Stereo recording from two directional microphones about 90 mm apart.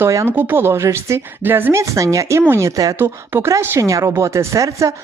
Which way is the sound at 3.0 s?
25° right (ahead or behind).